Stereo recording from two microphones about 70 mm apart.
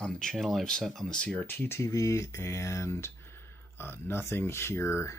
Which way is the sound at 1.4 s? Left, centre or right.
Left.